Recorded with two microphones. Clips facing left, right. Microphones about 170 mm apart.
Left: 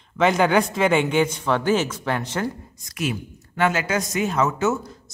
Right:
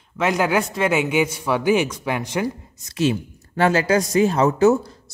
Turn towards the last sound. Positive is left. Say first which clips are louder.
# right 7 dB
turn(degrees=-35)  # may be behind; listen again after turning